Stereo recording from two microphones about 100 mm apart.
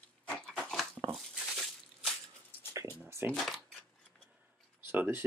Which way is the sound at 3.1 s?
25° right (ahead or behind).